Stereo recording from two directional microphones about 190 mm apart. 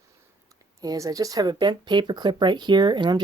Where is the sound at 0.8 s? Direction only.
20° right (ahead or behind).